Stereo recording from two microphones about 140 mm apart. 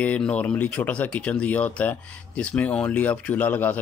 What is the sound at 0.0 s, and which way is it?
Speech, 10° left (ahead or behind).